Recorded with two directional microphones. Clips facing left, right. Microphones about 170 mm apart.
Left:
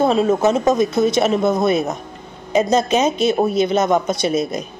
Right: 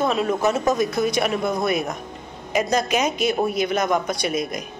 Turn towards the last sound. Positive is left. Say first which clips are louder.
# left 5 dB
turn(degrees=30)  # may be behind; listen again after turning